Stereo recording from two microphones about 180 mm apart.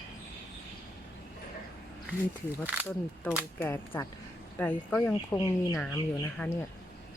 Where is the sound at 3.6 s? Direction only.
10° left (ahead or behind).